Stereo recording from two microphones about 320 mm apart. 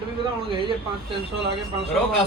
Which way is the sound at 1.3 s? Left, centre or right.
Centre.